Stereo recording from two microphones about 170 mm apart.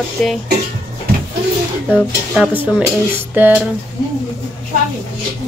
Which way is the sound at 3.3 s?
10° right (ahead or behind).